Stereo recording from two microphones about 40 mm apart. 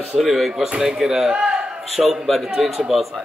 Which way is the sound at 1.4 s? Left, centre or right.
Right.